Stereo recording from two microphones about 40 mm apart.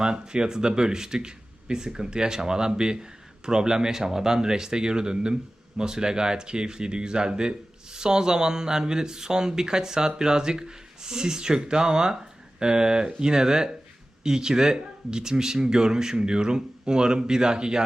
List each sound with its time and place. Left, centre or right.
0.0 s speech: centre